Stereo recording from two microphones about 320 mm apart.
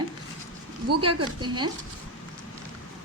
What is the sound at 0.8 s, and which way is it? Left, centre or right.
Speech, right.